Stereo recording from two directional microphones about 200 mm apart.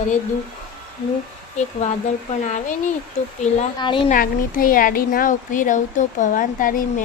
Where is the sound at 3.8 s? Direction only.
25° left (ahead or behind).